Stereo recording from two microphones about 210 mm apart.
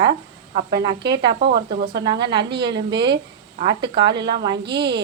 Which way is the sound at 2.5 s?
55° right (ahead or behind).